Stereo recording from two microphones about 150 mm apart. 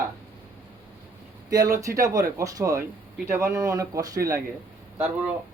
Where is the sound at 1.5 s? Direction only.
25° right (ahead or behind).